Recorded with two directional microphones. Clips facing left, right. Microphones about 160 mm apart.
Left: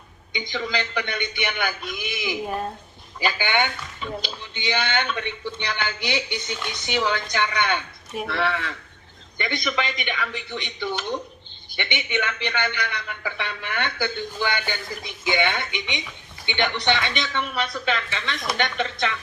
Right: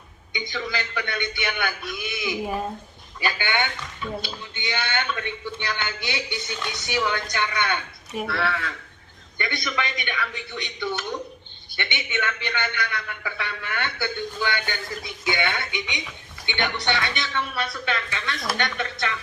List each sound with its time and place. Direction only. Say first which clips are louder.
0.3 s a man's voice: left 2 dB; 20° left (ahead or behind)
2.4 s speech: right 1 dB; centre (ahead or behind)
3.2 s a man's voice: left 2 dB; 20° left (ahead or behind)